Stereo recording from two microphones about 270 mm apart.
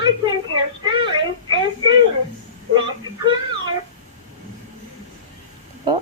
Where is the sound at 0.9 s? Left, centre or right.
Centre.